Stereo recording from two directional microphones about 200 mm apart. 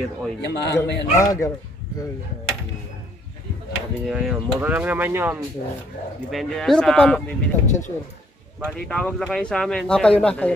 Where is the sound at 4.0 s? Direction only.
Centre (ahead or behind).